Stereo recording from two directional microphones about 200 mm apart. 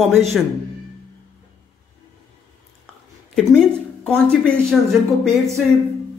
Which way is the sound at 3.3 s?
5° left (ahead or behind).